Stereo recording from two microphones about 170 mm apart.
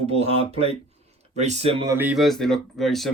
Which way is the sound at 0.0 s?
35° right (ahead or behind).